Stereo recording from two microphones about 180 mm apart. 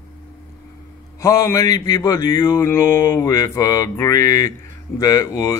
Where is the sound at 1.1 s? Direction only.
15° left (ahead or behind).